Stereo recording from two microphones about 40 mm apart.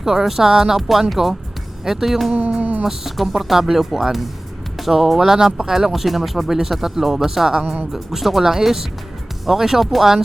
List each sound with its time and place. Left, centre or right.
0.0 s speech: centre
2.6 s speech: right
2.8 s speech: centre
6.6 s speech: centre